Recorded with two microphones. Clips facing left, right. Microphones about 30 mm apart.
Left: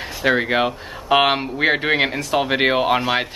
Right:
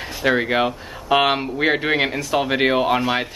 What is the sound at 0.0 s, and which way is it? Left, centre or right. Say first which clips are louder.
Speech: left 1 dB; centre.